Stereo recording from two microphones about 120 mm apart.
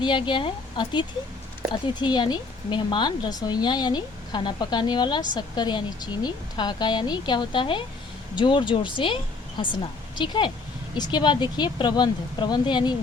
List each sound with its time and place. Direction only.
0.0 s a woman's voice: 40° left (ahead or behind)